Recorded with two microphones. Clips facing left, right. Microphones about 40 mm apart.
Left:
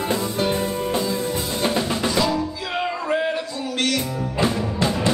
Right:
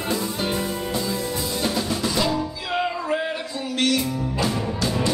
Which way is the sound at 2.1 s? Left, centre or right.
Centre.